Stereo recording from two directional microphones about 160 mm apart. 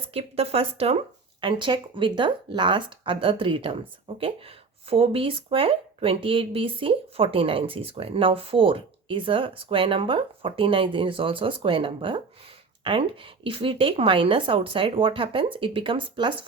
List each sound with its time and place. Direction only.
0.0 s speech: 40° right (ahead or behind)